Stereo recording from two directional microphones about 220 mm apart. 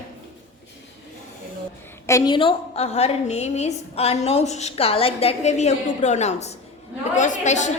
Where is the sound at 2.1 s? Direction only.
15° left (ahead or behind); by 7.7 s 35° left (ahead or behind).